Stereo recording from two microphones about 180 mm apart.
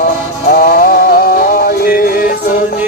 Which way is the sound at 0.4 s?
55° left (ahead or behind).